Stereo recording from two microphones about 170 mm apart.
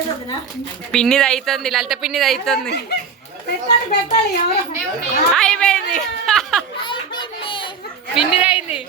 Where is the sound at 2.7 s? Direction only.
75° left (ahead or behind).